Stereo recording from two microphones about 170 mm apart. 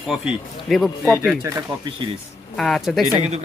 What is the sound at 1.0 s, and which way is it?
Speech, 15° right (ahead or behind).